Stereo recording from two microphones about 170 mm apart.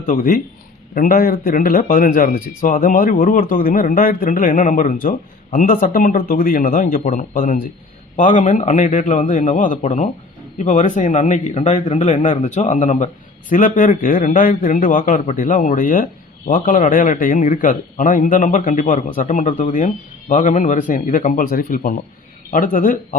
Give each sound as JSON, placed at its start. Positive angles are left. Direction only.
{"t": 0.0, "sound": "a man's voice", "side_deg": 55}